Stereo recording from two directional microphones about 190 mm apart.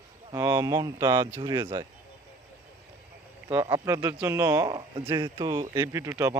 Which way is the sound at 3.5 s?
20° right (ahead or behind).